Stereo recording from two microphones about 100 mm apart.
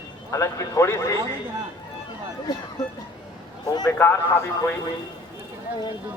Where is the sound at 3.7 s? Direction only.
45° left (ahead or behind).